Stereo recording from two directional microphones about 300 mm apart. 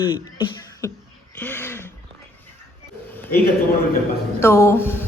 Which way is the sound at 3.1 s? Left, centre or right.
Centre.